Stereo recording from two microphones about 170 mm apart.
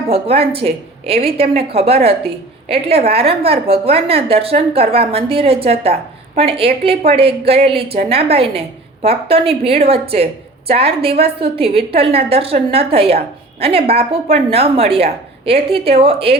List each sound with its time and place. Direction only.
0.1 s a woman's voice: 35° right (ahead or behind)